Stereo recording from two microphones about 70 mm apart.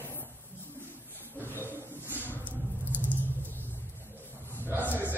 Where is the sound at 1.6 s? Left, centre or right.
Right.